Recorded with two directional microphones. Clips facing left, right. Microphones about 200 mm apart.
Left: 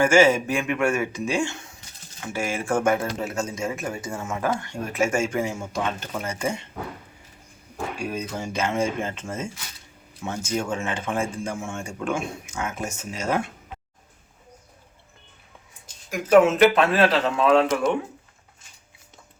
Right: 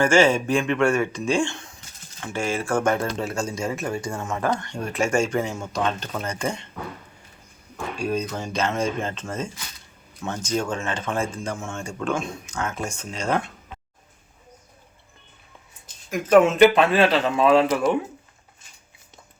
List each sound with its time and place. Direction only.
0.0 s speech: 10° left (ahead or behind)
3.1 s speech: 5° left (ahead or behind)
3.4 s speech: 35° right (ahead or behind)
3.8 s speech: 5° left (ahead or behind)
7.9 s speech: 10° left (ahead or behind)
16.0 s a man's voice: 10° left (ahead or behind)